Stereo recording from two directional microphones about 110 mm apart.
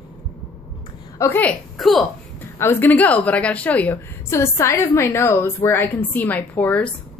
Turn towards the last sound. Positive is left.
turn(degrees=15)  # may be behind; listen again after turning